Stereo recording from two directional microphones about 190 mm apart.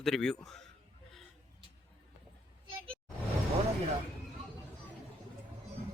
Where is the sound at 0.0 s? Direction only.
5° left (ahead or behind).